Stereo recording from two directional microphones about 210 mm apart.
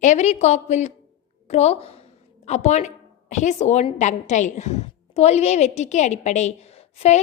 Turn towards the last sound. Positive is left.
turn(degrees=30)  # may be behind; listen again after turning